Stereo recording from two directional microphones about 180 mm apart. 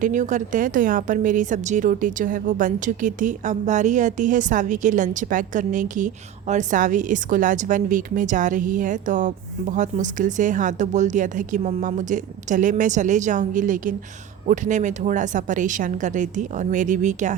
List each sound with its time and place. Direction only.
0.0 s a woman's voice: 45° right (ahead or behind)